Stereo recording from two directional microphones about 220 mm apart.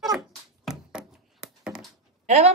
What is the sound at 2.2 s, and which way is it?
Speech, 30° right (ahead or behind).